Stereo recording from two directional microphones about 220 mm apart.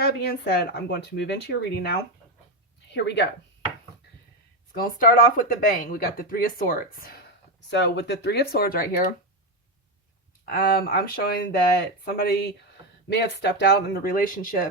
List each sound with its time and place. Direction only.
0.0 s speech: 45° left (ahead or behind)
4.7 s speech: 40° left (ahead or behind)
10.4 s speech: 40° left (ahead or behind)